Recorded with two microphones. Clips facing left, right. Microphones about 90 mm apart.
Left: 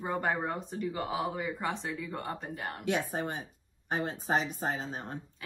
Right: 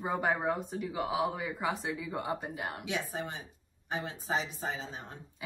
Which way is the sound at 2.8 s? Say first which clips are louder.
Left 8 dB; 50° left (ahead or behind).